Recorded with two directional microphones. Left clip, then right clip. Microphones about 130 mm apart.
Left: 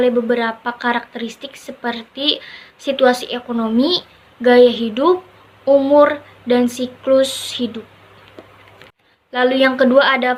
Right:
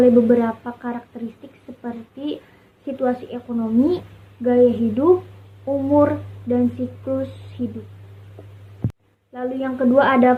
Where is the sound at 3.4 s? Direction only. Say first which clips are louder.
Left 2 dB; 35° left (ahead or behind).